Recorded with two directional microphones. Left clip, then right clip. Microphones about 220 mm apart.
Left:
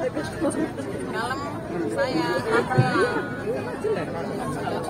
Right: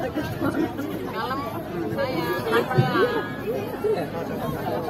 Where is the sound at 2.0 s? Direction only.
50° left (ahead or behind).